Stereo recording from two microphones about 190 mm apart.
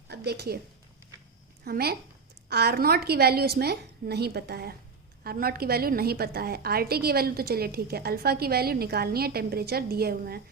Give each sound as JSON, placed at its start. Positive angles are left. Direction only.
{"t": 0.1, "sound": "a woman's voice", "side_deg": -60}
{"t": 1.6, "sound": "a woman's voice", "side_deg": -55}